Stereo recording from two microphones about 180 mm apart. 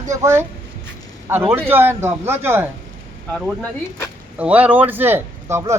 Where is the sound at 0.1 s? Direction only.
15° right (ahead or behind).